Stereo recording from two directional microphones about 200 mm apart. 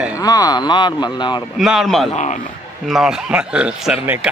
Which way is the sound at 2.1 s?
35° left (ahead or behind).